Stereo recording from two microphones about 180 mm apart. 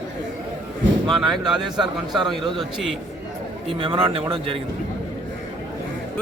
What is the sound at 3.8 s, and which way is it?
Speech, 30° right (ahead or behind).